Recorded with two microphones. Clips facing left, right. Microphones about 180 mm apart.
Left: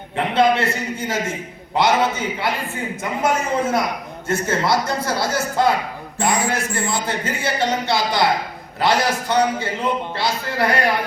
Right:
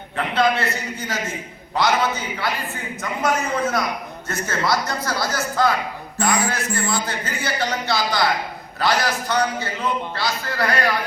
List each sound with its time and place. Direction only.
0.2 s a man's voice: 25° left (ahead or behind)